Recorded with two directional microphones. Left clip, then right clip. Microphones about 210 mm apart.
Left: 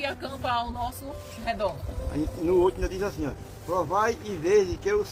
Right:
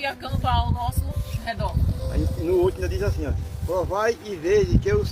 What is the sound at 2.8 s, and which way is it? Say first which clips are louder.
Speech: right 2 dB; 45° left (ahead or behind).